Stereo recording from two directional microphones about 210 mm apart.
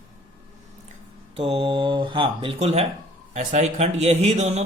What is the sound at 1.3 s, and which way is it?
Speech, 25° right (ahead or behind).